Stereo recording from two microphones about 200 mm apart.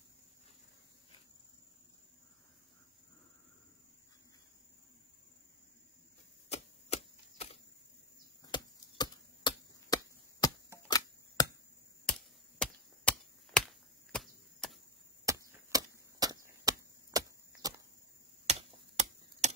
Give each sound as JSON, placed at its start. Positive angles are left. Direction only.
{"t": 6.5, "sound": "a sound", "side_deg": 30}
{"t": 8.5, "sound": "chop", "side_deg": 20}
{"t": 10.4, "sound": "a sound", "side_deg": 20}
{"t": 11.4, "sound": "chop", "side_deg": 20}
{"t": 12.1, "sound": "chop", "side_deg": 5}
{"t": 15.2, "sound": "chop", "side_deg": -15}
{"t": 18.5, "sound": "computer keyboard", "side_deg": -35}